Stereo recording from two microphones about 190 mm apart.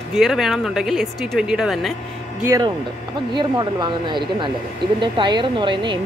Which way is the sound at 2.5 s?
20° right (ahead or behind).